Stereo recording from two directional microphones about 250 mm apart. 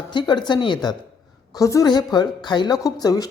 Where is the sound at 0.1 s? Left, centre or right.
Centre.